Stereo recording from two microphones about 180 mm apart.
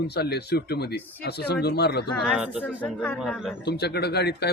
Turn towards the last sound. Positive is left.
turn(degrees=65)  # may be behind; listen again after turning